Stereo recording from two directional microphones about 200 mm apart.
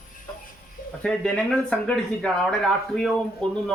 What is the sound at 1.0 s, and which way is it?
Speech, 5° left (ahead or behind).